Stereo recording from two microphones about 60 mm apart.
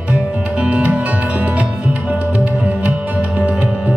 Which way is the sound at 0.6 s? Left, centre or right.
Right.